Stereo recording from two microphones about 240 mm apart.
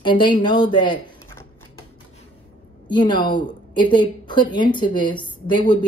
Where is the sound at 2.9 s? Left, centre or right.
Centre.